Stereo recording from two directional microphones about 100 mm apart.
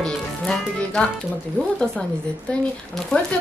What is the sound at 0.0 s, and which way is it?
Music, 5° left (ahead or behind).